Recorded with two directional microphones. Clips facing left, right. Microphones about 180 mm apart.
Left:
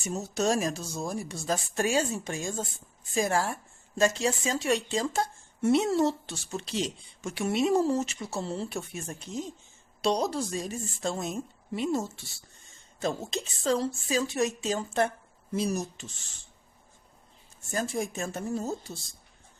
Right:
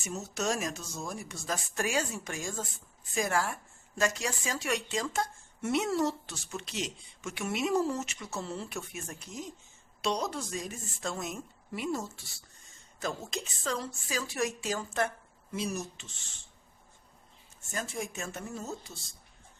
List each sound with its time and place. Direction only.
0.0 s a woman's voice: 35° left (ahead or behind)
15.5 s speech: 40° left (ahead or behind)
17.7 s speech: 35° left (ahead or behind)